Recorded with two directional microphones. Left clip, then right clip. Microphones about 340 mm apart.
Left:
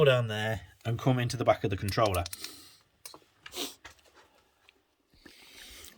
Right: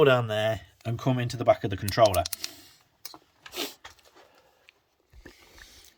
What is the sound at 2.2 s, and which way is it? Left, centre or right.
Speech, right.